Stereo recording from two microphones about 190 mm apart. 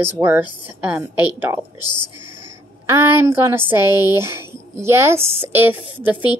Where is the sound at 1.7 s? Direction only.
25° left (ahead or behind).